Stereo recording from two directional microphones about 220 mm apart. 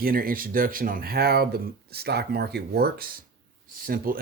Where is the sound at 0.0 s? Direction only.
40° right (ahead or behind).